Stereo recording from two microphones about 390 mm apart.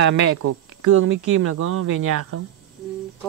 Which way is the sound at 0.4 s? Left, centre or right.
Right.